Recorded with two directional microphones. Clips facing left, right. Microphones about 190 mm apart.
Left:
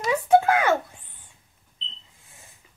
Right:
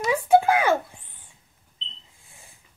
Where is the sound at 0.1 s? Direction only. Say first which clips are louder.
Even; 10° right (ahead or behind).